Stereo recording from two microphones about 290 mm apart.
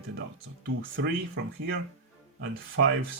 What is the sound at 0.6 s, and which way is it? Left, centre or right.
Speech, right.